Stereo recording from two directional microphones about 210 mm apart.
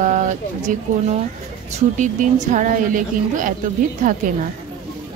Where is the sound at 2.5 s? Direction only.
40° right (ahead or behind).